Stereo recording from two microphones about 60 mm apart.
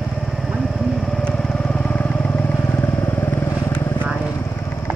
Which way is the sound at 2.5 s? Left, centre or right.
Left.